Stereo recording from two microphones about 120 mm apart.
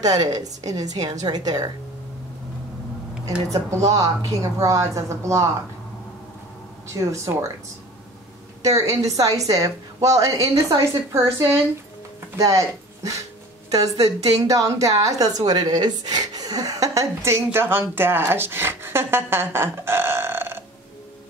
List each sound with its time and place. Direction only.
0.0 s a woman's voice: 30° right (ahead or behind)
3.7 s a woman's voice: 30° right (ahead or behind)
6.9 s a woman's voice: 25° right (ahead or behind)
8.6 s a woman's voice: 25° right (ahead or behind)